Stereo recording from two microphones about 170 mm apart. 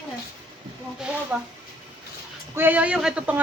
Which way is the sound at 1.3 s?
10° right (ahead or behind).